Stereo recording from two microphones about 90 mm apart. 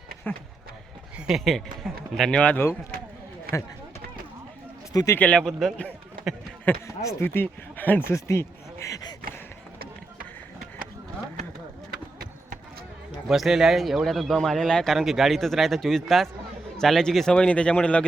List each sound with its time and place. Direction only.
0.3 s speech: 20° left (ahead or behind)
1.5 s speech: 5° left (ahead or behind)
2.4 s speech: 15° left (ahead or behind)
4.9 s speech: 40° left (ahead or behind)
5.4 s speech: centre (ahead or behind)
6.8 s speech: 30° left (ahead or behind)
7.4 s speech: 20° left (ahead or behind)
8.1 s speech: 35° left (ahead or behind)
13.2 s speech: centre (ahead or behind); by 18.0 s 15° left (ahead or behind)